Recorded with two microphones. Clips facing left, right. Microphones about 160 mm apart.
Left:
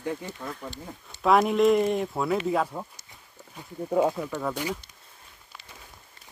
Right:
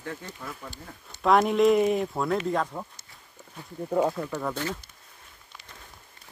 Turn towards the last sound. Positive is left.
turn(degrees=10)  # may be behind; listen again after turning